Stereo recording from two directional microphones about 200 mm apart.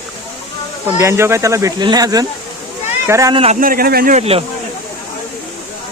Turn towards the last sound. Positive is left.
turn(degrees=-30)  # may be behind; listen again after turning